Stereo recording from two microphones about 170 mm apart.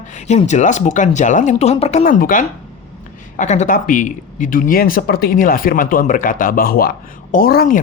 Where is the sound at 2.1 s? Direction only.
50° left (ahead or behind).